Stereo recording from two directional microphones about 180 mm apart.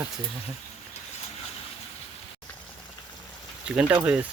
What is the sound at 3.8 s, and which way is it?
Speech, 10° right (ahead or behind).